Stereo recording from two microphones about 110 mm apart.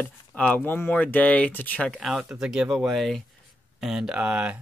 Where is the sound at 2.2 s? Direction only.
10° right (ahead or behind).